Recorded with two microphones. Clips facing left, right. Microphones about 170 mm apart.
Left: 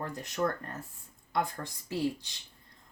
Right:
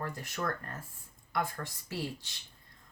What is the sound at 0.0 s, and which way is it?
Speech, 20° left (ahead or behind).